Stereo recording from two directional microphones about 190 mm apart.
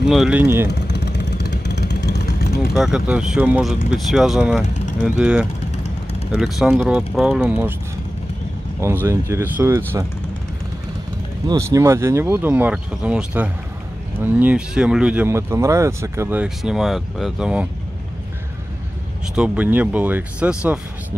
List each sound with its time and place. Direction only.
0.1 s speech: 5° right (ahead or behind)
0.7 s vehicle: 65° left (ahead or behind)
2.7 s speech: 5° right (ahead or behind)
8.8 s speech: 15° right (ahead or behind)
11.4 s speech: 15° right (ahead or behind)
19.3 s speech: 5° right (ahead or behind)